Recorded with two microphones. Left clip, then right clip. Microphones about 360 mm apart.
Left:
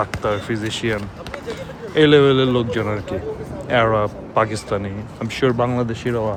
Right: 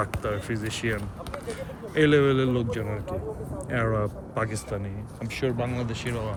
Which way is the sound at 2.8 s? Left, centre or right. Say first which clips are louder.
Left 9 dB; left.